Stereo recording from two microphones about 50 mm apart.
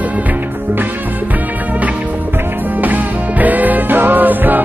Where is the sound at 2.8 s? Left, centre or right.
Right.